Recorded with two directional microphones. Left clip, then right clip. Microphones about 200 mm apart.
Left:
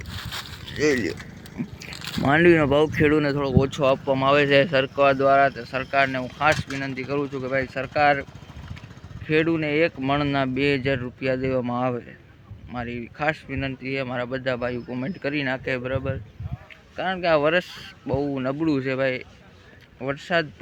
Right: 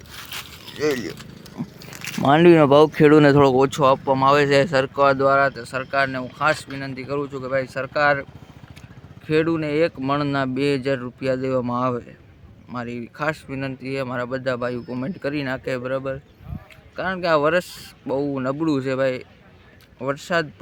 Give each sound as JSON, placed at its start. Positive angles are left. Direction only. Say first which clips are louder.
{"t": 0.2, "sound": "livestock", "louder": "right 1 dB", "side_deg": -15}
{"t": 0.8, "sound": "speech", "louder": "left 1 dB", "side_deg": 5}
{"t": 1.6, "sound": "dog", "louder": "even", "side_deg": -5}
{"t": 2.1, "sound": "speech", "louder": "right 4 dB", "side_deg": -15}